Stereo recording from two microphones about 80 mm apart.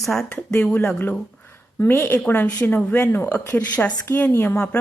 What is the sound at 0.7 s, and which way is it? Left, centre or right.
Speech, left.